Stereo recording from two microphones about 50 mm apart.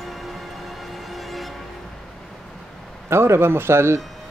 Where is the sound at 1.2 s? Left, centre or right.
Centre.